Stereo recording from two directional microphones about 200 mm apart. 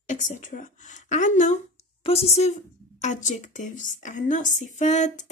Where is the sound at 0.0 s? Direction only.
40° left (ahead or behind).